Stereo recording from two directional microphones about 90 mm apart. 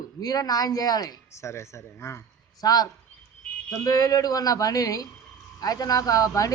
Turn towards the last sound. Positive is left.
turn(degrees=40)  # may be behind; listen again after turning